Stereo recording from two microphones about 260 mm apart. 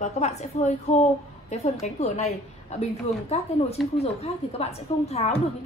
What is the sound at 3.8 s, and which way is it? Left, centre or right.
Speech, centre.